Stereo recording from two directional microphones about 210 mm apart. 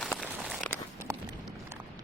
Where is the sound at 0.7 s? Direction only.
10° right (ahead or behind).